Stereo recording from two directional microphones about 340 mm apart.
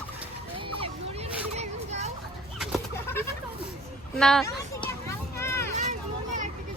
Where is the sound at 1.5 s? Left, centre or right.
Centre.